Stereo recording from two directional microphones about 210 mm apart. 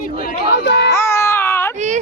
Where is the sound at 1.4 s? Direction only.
10° left (ahead or behind).